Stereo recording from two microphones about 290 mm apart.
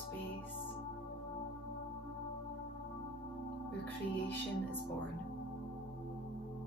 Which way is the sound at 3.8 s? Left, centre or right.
Centre.